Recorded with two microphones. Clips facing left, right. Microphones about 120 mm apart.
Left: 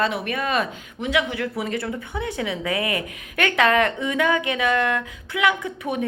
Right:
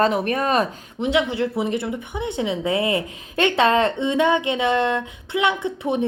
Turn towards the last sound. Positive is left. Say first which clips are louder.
# right 3 dB
turn(degrees=-25)  # may be behind; listen again after turning